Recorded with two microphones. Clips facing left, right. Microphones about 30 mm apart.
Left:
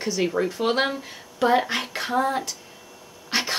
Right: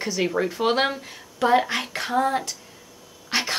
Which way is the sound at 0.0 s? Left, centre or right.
Centre.